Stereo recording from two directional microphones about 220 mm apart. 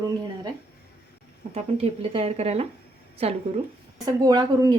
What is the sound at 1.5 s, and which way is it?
Speech, 25° right (ahead or behind).